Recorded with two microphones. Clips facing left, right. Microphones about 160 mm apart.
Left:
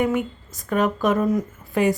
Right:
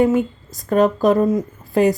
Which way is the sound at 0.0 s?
30° right (ahead or behind).